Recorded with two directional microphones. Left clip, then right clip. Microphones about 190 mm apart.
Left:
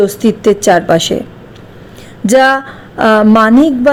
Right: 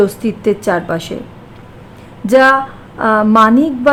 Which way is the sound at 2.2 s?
20° left (ahead or behind).